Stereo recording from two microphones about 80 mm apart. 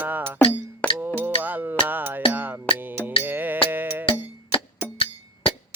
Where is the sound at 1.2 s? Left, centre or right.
Right.